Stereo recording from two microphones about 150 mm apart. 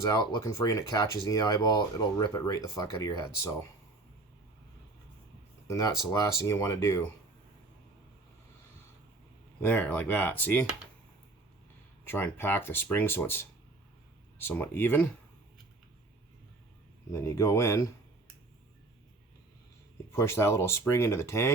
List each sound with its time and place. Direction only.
0.0 s speech: 25° left (ahead or behind)
5.6 s speech: 20° left (ahead or behind)
9.6 s speech: 10° left (ahead or behind)
12.0 s speech: 15° left (ahead or behind)
14.4 s speech: 15° left (ahead or behind)
17.1 s speech: 20° left (ahead or behind)
20.1 s speech: 15° left (ahead or behind)